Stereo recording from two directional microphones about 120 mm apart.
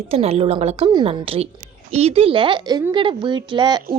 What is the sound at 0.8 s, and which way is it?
A woman's voice, 40° right (ahead or behind).